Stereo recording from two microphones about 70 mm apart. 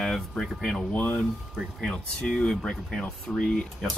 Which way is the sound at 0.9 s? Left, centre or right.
Left.